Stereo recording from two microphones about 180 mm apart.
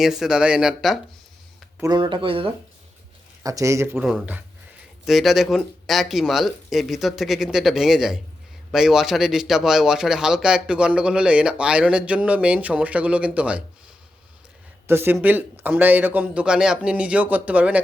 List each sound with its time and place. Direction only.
0.0 s a man's voice: 5° right (ahead or behind)
1.8 s speech: 25° right (ahead or behind)
3.4 s a man's voice: 15° right (ahead or behind)
4.0 s a man's voice: 5° right (ahead or behind)
14.8 s a man's voice: 10° right (ahead or behind)